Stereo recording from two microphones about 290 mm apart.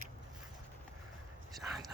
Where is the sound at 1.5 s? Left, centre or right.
Centre.